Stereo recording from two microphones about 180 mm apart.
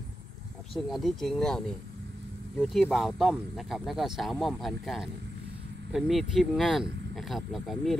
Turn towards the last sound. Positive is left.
turn(degrees=0)  # may be behind; listen again after turning